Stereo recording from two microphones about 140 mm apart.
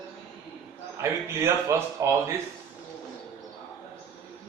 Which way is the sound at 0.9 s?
20° right (ahead or behind).